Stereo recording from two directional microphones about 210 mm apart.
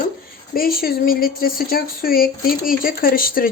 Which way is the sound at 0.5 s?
45° left (ahead or behind).